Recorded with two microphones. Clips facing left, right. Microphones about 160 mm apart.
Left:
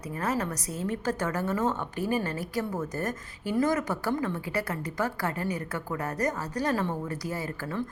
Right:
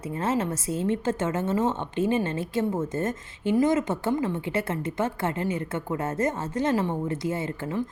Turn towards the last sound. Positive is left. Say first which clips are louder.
# right 4 dB
turn(degrees=-20)  # may be behind; listen again after turning